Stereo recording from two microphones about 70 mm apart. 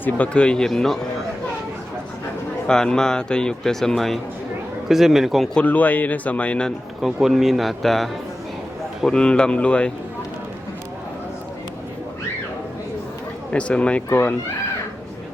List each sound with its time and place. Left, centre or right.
0.0 s a man's voice: centre
2.6 s a man's voice: centre
5.5 s a man's voice: left
7.0 s a man's voice: centre
9.0 s a man's voice: centre
13.5 s a man's voice: centre
14.1 s a man's voice: left